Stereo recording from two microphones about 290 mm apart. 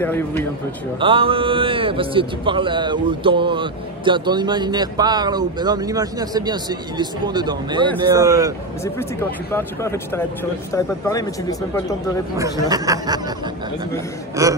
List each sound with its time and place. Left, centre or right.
0.0 s speech: centre
1.0 s a man's voice: centre
9.5 s speech: centre
12.4 s a man's voice: centre
14.4 s a man's voice: centre